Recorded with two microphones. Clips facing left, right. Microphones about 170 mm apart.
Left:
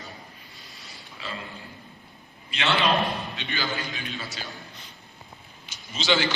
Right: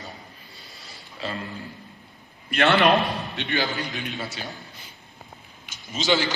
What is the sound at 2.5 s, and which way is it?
Speech, 55° right (ahead or behind).